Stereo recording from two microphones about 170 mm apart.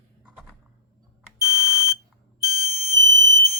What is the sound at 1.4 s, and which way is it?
Smoke detector, 5° right (ahead or behind).